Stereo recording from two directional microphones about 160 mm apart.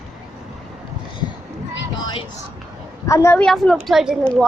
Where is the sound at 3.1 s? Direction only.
15° left (ahead or behind).